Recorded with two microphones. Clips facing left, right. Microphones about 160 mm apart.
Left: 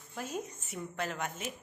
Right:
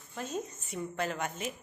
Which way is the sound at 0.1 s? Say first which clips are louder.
Right 2 dB; 10° left (ahead or behind).